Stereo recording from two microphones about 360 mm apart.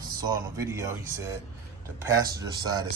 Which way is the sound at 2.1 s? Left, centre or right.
Centre.